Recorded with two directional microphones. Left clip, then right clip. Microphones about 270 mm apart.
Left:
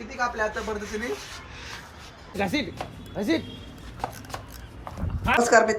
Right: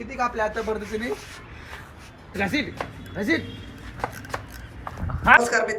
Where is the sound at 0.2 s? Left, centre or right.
Centre.